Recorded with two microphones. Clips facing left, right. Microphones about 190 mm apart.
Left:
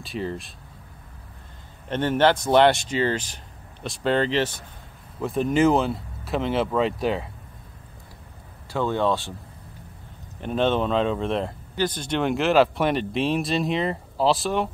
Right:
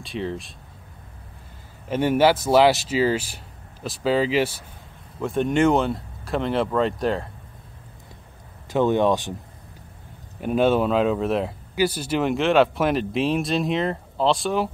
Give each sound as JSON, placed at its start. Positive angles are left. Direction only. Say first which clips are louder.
{"t": 0.0, "sound": "speech", "louder": "right 1 dB", "side_deg": 0}
{"t": 1.9, "sound": "speech", "louder": "right 2 dB", "side_deg": -10}
{"t": 8.6, "sound": "speech", "louder": "right 4 dB", "side_deg": -20}
{"t": 10.4, "sound": "speech", "louder": "right 3 dB", "side_deg": -10}